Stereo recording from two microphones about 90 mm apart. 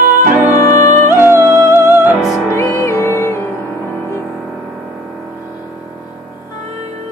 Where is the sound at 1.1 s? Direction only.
25° right (ahead or behind).